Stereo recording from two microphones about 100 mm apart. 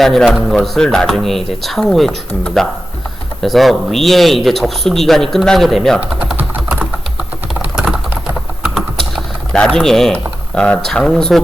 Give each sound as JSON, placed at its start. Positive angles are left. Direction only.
{"t": 0.0, "sound": "speech", "side_deg": 0}
{"t": 6.0, "sound": "speech", "side_deg": -15}
{"t": 6.3, "sound": "typing", "side_deg": -15}
{"t": 8.7, "sound": "typing", "side_deg": 0}